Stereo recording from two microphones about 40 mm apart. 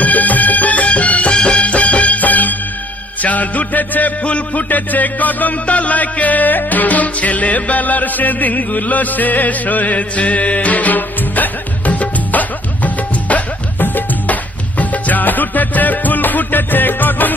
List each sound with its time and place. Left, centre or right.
0.0 s music: left
4.2 s a man's voice: left
4.6 s music: left